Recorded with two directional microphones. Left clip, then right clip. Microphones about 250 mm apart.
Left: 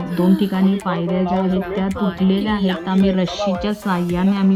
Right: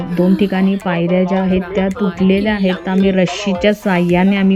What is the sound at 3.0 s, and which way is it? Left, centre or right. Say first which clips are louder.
Speech: right 5 dB; left.